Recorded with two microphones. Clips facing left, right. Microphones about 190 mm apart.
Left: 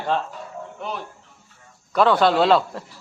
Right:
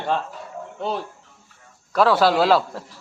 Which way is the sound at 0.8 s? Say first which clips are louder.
Right 5 dB; 30° right (ahead or behind).